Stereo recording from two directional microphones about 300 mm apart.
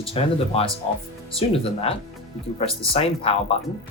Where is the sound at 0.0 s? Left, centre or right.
Centre.